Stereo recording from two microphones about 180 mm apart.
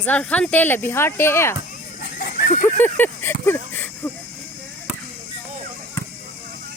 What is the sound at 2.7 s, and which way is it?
Speech, 10° left (ahead or behind).